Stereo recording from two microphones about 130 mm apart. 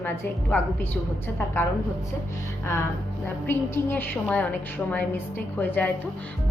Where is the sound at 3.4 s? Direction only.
15° left (ahead or behind).